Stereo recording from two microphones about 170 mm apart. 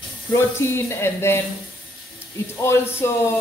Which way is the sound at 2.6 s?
15° left (ahead or behind).